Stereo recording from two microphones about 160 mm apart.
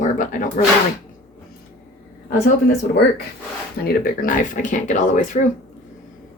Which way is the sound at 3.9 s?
55° left (ahead or behind).